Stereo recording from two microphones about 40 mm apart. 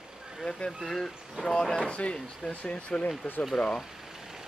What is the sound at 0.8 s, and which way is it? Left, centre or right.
Speech, centre.